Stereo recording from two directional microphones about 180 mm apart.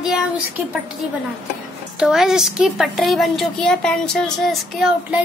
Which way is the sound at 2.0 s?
5° right (ahead or behind).